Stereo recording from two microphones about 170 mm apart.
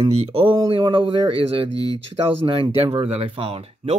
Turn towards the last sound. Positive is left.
turn(degrees=-35)  # may be behind; listen again after turning